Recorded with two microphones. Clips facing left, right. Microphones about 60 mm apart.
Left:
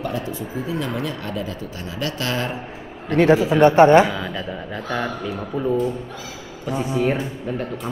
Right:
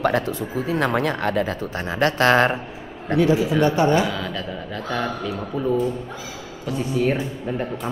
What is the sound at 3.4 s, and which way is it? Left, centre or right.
Speech, left.